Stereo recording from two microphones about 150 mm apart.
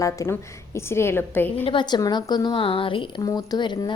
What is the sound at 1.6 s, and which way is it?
A woman's voice, 30° left (ahead or behind).